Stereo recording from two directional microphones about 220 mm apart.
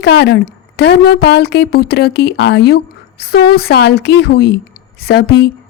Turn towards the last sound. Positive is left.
turn(degrees=45)  # may be behind; listen again after turning